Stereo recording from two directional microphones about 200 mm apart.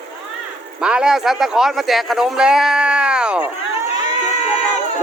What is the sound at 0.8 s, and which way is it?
A man's voice, 5° right (ahead or behind).